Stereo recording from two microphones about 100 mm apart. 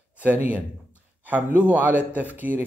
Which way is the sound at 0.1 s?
15° right (ahead or behind).